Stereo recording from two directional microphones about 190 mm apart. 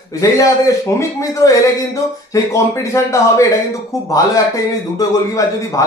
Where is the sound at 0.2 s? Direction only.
15° left (ahead or behind).